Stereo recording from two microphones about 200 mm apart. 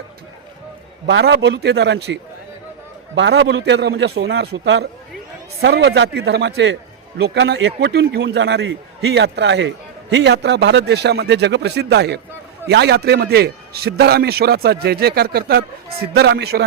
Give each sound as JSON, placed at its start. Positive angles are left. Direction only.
{"t": 1.0, "sound": "a man's voice", "side_deg": -60}
{"t": 3.2, "sound": "a man's voice", "side_deg": -60}